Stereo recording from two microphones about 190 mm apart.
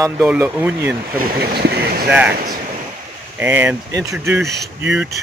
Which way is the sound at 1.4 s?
55° right (ahead or behind).